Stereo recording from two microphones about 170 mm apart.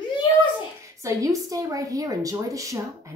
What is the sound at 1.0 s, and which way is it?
Speech, 20° right (ahead or behind).